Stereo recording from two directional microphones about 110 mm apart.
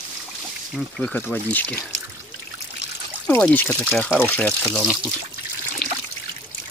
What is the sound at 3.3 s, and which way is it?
Speech, 15° left (ahead or behind).